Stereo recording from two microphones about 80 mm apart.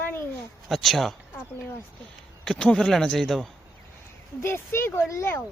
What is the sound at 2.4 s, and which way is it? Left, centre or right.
Speech, centre.